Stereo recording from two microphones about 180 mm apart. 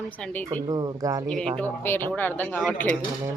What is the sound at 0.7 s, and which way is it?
Speech, 20° right (ahead or behind).